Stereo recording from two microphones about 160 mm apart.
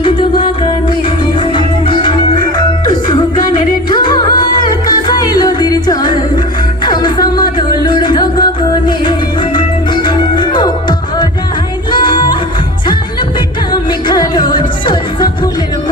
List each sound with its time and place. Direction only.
0.0 s music: 30° left (ahead or behind)
13.7 s music: 25° left (ahead or behind)